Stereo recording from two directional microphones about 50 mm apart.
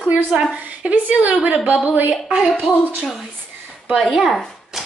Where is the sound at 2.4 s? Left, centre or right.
Centre.